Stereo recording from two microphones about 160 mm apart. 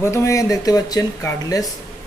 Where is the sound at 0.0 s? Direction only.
20° left (ahead or behind).